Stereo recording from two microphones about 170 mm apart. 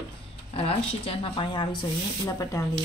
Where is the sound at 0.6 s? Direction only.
35° left (ahead or behind).